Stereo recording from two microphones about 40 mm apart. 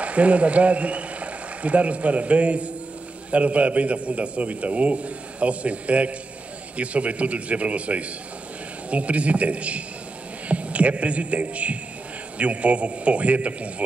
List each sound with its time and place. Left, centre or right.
0.0 s a man's voice: right